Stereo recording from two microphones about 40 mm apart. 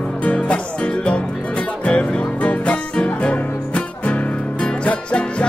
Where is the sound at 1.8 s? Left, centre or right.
Left.